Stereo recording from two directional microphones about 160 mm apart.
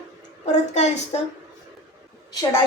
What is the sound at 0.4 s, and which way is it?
Speech, 45° left (ahead or behind).